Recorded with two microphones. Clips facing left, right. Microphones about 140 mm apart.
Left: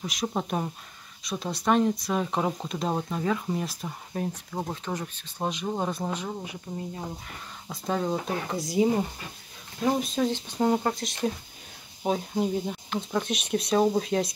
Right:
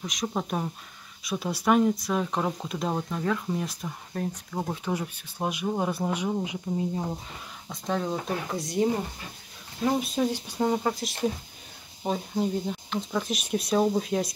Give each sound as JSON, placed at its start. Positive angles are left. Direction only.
{"t": 0.0, "sound": "speech", "side_deg": 5}
{"t": 4.8, "sound": "speech", "side_deg": -10}
{"t": 6.0, "sound": "speech", "side_deg": -15}
{"t": 7.7, "sound": "speech", "side_deg": 0}
{"t": 10.1, "sound": "speech", "side_deg": -10}
{"t": 10.6, "sound": "speech", "side_deg": 5}